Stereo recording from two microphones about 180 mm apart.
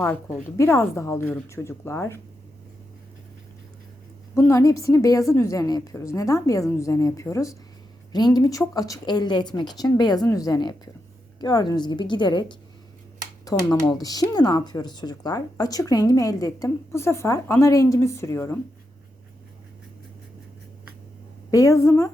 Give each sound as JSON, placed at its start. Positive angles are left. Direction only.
{"t": 0.0, "sound": "a woman's voice", "side_deg": 15}
{"t": 4.4, "sound": "a woman's voice", "side_deg": 15}
{"t": 21.5, "sound": "a woman's voice", "side_deg": 15}